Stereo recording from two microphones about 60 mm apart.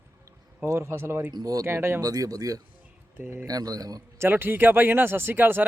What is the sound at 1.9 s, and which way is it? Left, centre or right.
A man's voice, right.